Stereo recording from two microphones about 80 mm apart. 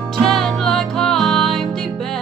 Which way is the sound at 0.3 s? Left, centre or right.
Centre.